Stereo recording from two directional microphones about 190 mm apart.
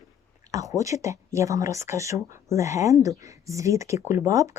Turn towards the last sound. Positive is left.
turn(degrees=-15)  # may be behind; listen again after turning